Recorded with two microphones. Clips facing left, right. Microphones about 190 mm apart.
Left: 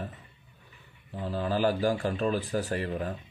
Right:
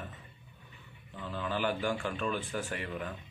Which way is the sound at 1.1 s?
35° left (ahead or behind).